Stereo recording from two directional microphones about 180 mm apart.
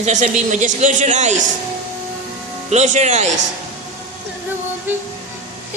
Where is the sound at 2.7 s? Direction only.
40° right (ahead or behind).